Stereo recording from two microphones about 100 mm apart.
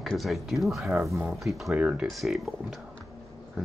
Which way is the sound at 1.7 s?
15° right (ahead or behind).